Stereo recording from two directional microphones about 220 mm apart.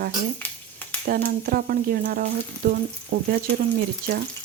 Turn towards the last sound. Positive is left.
turn(degrees=-45)  # may be behind; listen again after turning